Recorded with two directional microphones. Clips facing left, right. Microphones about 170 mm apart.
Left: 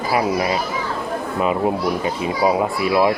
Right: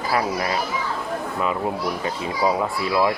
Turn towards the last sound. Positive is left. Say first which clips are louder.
# left 4 dB
turn(degrees=20)  # may be behind; listen again after turning